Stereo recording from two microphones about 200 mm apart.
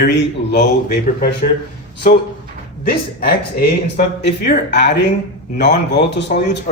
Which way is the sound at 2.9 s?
50° left (ahead or behind).